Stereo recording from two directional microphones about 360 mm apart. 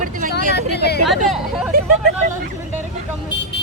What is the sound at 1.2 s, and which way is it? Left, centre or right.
Speech, centre.